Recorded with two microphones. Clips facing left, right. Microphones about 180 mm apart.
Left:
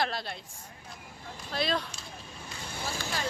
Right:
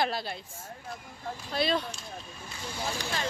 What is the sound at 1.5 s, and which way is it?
Speech, centre (ahead or behind).